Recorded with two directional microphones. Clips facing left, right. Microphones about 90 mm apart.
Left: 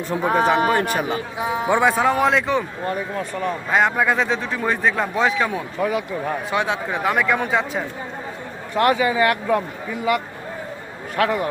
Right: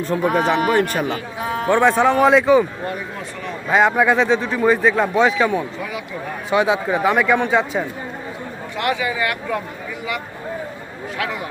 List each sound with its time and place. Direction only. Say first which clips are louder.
0.3 s a man's voice: left 1 dB; 15° left (ahead or behind); by 2.6 s centre (ahead or behind)
3.7 s a man's voice: right 4 dB; centre (ahead or behind)
8.7 s speech: left 4 dB; 40° left (ahead or behind)
11.2 s speech: left 6 dB; 45° left (ahead or behind)